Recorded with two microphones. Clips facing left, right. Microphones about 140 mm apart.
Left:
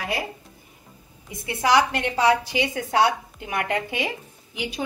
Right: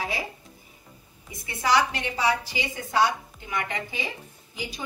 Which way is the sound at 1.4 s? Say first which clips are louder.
Left 3 dB; 60° left (ahead or behind).